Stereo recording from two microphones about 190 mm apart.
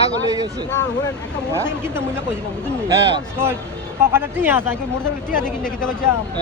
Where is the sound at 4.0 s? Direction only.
15° right (ahead or behind).